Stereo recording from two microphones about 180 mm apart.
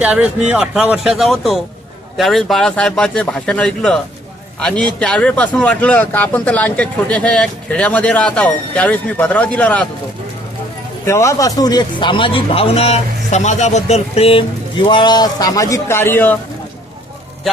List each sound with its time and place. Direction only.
0.0 s speech: 5° right (ahead or behind)
11.0 s a man's voice: 15° left (ahead or behind)